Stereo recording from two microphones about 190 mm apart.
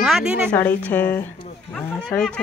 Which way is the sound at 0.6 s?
10° left (ahead or behind).